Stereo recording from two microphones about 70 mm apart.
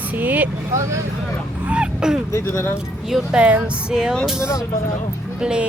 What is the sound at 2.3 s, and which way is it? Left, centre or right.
Speech, left.